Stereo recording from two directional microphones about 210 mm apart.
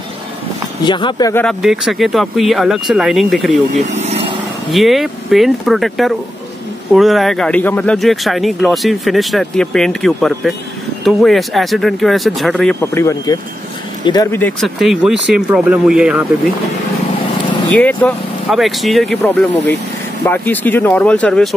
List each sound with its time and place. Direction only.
0.8 s speech: 20° left (ahead or behind)
1.3 s speech: 5° left (ahead or behind)
3.9 s vehicle: 30° right (ahead or behind)
4.6 s speech: centre (ahead or behind)
17.7 s speech: 5° left (ahead or behind)